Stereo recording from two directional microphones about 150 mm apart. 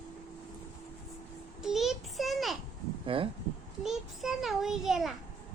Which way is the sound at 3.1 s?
35° right (ahead or behind).